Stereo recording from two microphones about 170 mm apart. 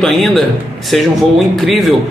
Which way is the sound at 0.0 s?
Centre (ahead or behind).